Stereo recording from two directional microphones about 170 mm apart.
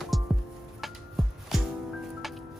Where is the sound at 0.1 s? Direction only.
Centre (ahead or behind).